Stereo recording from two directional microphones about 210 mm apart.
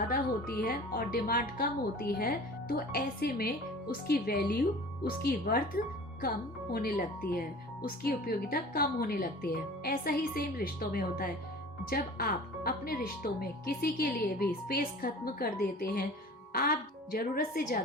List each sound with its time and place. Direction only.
0.1 s a woman's voice: 45° left (ahead or behind)